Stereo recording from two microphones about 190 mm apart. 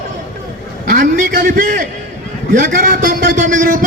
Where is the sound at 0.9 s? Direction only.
45° right (ahead or behind).